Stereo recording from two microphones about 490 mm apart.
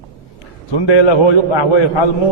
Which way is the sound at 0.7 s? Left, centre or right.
Left.